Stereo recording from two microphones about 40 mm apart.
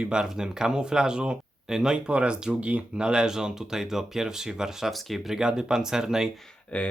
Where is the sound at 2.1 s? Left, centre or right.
Right.